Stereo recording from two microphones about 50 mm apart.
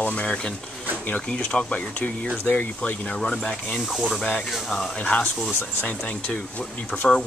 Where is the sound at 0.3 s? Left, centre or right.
Centre; by 2.7 s left.